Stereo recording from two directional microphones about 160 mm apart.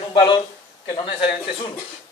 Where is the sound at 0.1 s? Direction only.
30° left (ahead or behind).